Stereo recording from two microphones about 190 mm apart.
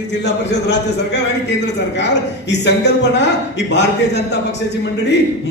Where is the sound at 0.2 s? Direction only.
65° left (ahead or behind).